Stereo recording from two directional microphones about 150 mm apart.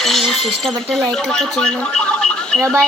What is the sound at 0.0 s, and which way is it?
Chink, centre (ahead or behind).